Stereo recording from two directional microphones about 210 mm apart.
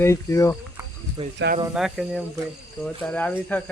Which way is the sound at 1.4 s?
60° right (ahead or behind).